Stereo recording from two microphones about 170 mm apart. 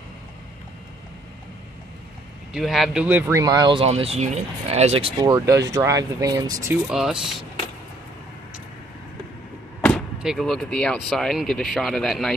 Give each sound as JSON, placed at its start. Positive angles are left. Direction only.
{"t": 2.5, "sound": "speech", "side_deg": 0}
{"t": 5.3, "sound": "speech", "side_deg": -20}
{"t": 6.9, "sound": "speech", "side_deg": -5}
{"t": 9.8, "sound": "vehicle", "side_deg": 10}
{"t": 10.2, "sound": "speech", "side_deg": 0}